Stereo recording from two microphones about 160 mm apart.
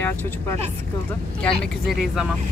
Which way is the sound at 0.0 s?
15° left (ahead or behind).